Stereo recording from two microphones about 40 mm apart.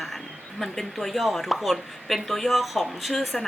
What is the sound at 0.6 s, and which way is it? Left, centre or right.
Speech, centre.